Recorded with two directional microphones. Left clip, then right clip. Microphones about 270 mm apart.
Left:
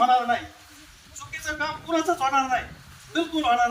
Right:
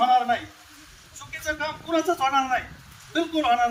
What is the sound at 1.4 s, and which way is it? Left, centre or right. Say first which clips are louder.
A man's voice: even; centre.